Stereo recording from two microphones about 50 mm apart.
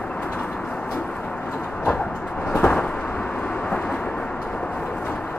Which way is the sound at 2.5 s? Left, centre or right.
Left.